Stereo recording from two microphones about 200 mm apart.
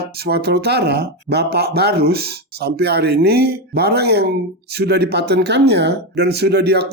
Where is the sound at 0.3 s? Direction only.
55° right (ahead or behind).